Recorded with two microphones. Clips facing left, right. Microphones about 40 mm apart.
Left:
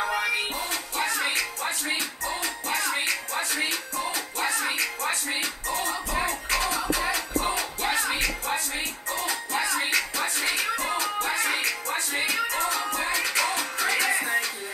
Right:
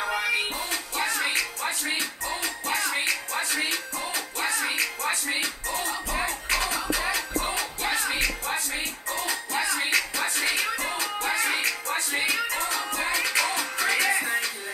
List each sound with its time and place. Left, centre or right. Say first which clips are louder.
0.0 s music: even; centre
9.8 s music: right 1 dB; centre
10.5 s music: even; centre
11.2 s music: right 4 dB; centre